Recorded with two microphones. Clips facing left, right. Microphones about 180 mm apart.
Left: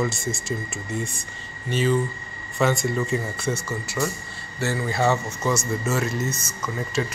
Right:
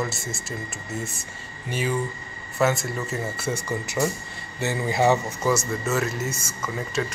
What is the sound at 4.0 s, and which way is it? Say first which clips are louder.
Speech: right 2 dB; 20° right (ahead or behind).